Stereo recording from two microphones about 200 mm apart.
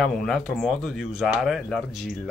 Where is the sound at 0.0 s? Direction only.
5° left (ahead or behind).